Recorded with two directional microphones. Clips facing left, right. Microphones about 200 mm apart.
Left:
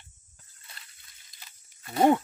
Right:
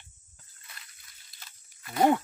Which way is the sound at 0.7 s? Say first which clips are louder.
Even; 30° left (ahead or behind).